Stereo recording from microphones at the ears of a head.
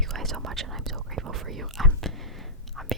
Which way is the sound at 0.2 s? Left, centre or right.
Right.